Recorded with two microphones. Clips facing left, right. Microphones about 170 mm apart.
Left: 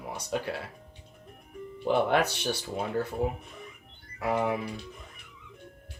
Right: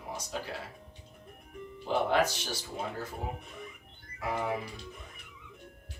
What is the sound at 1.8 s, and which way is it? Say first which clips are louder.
Speech: left 3 dB; 65° left (ahead or behind).